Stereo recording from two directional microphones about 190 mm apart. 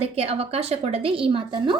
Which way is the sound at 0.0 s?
30° right (ahead or behind).